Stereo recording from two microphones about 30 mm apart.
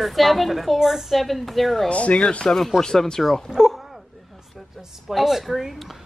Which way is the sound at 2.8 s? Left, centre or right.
Centre.